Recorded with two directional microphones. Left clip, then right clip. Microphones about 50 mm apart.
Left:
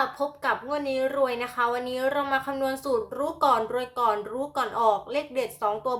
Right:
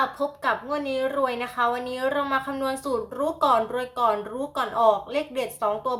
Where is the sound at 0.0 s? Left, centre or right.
Left.